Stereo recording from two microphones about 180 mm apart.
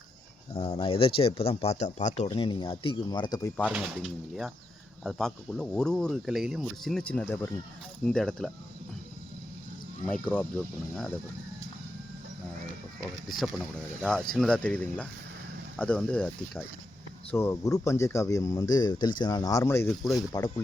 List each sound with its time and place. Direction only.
0.5 s speech: 30° left (ahead or behind)
3.7 s speech: 5° right (ahead or behind)
10.1 s speech: 5° left (ahead or behind)
14.0 s speech: 5° left (ahead or behind); by 20.5 s 20° left (ahead or behind)